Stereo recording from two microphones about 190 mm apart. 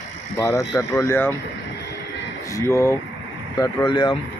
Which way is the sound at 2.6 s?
15° left (ahead or behind).